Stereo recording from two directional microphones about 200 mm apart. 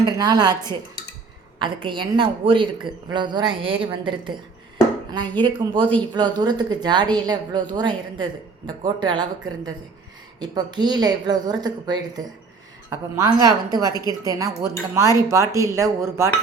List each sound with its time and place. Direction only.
0.0 s a woman's voice: 20° right (ahead or behind)
1.5 s a woman's voice: 25° right (ahead or behind)
5.4 s a woman's voice: 25° right (ahead or behind)
10.4 s a woman's voice: 20° right (ahead or behind)